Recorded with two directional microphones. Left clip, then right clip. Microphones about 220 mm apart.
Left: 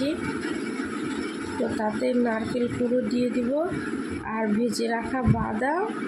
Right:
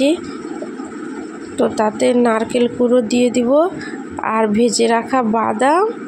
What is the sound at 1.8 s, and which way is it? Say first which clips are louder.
Speech: right 11 dB; 35° right (ahead or behind).